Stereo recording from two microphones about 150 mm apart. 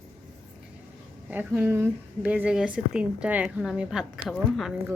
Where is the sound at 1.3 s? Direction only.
15° right (ahead or behind).